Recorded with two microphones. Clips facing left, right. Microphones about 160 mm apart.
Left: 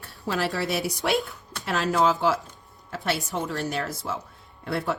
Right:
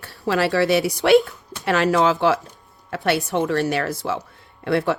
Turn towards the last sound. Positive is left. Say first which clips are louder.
# right 7 dB
turn(degrees=-90)